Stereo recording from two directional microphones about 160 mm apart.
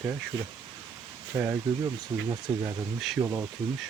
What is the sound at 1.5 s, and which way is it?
Speech, 20° right (ahead or behind).